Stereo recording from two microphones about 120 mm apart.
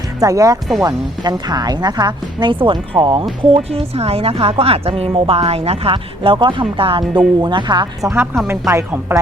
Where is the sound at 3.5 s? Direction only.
55° right (ahead or behind); by 8.1 s 40° right (ahead or behind).